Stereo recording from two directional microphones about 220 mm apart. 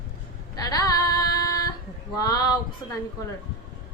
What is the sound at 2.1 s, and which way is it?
Mantra, 15° left (ahead or behind).